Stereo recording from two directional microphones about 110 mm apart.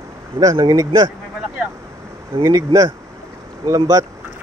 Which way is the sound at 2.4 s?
30° right (ahead or behind).